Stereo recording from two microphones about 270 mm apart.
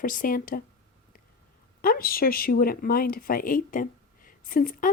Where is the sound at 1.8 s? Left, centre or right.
Left.